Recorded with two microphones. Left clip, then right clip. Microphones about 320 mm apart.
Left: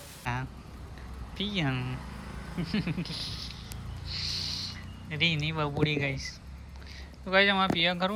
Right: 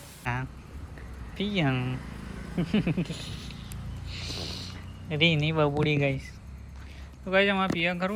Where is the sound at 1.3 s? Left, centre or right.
Centre.